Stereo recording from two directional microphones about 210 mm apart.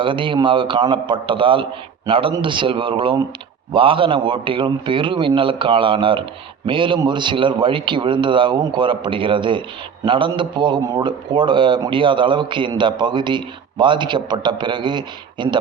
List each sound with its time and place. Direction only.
0.0 s a man's voice: 25° right (ahead or behind)